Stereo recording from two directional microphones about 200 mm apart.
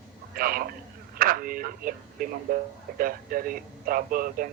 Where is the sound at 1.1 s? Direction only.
45° right (ahead or behind).